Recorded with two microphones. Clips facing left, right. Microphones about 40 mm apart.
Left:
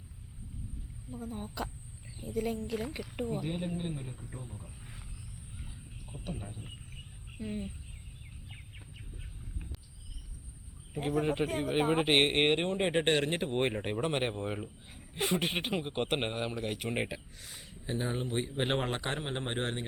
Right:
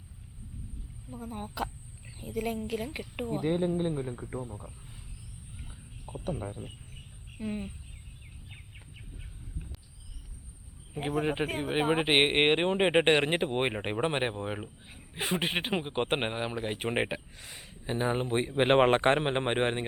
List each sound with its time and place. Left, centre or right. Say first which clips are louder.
1.1 s speech: right 1 dB; centre
2.9 s speech: right 1 dB; right
3.3 s speech: right 7 dB; right
4.1 s a man's voice: right 8 dB; right
6.2 s a man's voice: right 7 dB; right
7.3 s speech: right 3 dB; centre
11.1 s speech: right 1 dB; centre; by 19.8 s right